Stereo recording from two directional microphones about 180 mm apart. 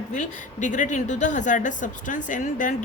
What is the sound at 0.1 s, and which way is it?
A woman's voice, 45° left (ahead or behind).